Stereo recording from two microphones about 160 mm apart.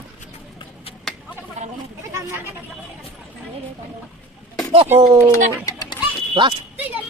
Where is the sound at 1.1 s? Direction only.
Centre (ahead or behind).